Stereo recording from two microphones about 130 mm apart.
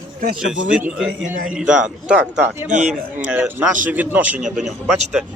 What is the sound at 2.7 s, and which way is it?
Speech, 70° right (ahead or behind).